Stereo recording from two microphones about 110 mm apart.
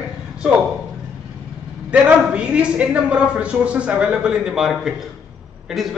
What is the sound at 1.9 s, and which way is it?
A man's voice, 10° right (ahead or behind).